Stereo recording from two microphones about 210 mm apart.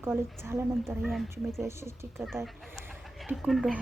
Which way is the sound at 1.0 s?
Centre (ahead or behind).